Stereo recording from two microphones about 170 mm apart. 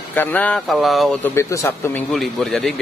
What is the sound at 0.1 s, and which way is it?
Speech, 10° left (ahead or behind).